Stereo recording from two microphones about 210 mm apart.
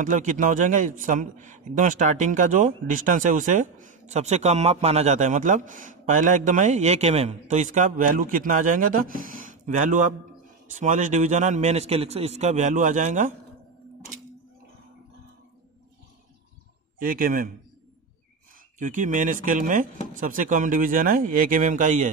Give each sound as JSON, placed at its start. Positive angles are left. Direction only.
{"t": 0.0, "sound": "a man's voice", "side_deg": -35}
{"t": 17.0, "sound": "a man's voice", "side_deg": -40}
{"t": 18.8, "sound": "a man's voice", "side_deg": -40}